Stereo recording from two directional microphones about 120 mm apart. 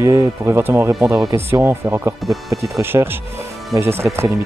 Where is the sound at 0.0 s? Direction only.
25° right (ahead or behind).